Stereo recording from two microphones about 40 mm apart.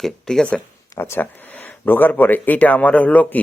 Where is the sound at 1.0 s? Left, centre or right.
Left.